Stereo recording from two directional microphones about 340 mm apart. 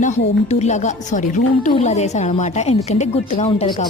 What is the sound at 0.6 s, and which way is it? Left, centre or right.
A woman's voice, left.